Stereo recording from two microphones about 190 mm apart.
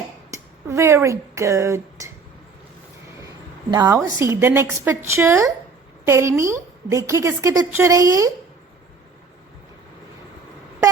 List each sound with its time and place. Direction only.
0.3 s speech: 15° right (ahead or behind)
3.7 s a woman's voice: 20° right (ahead or behind)